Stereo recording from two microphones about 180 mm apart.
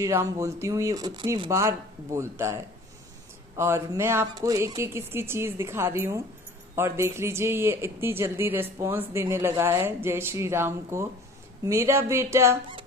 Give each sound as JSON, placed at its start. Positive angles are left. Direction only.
{"t": 0.0, "sound": "speech", "side_deg": -15}